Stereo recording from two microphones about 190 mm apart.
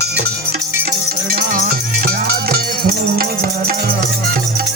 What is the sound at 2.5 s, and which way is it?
Music, 55° right (ahead or behind).